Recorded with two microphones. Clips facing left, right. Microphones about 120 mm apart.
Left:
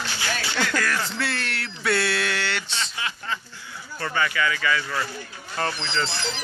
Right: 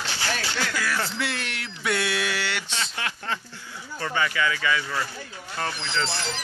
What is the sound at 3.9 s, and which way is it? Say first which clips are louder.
Speech: left 1 dB; 20° right (ahead or behind).